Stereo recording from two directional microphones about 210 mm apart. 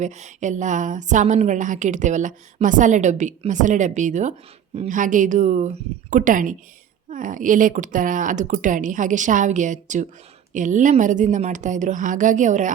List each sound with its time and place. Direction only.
0.0 s a woman's voice: 35° right (ahead or behind)